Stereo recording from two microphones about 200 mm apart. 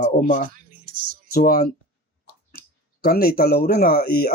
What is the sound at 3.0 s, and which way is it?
Speech, 50° left (ahead or behind).